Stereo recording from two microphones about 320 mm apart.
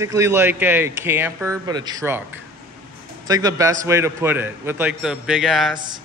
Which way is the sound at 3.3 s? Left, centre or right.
Centre.